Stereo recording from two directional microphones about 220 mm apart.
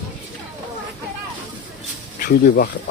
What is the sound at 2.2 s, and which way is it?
Speech, 40° left (ahead or behind).